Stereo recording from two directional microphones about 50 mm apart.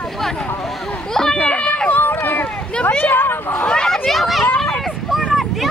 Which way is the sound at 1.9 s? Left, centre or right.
Left.